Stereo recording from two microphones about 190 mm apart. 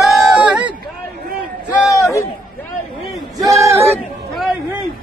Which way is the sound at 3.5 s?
15° right (ahead or behind).